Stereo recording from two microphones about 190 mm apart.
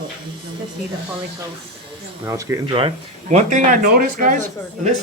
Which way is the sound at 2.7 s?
35° right (ahead or behind).